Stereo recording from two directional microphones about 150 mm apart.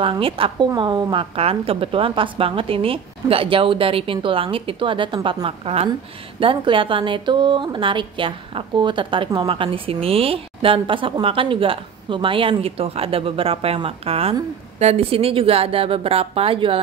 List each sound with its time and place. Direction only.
0.0 s a woman's voice: 35° right (ahead or behind)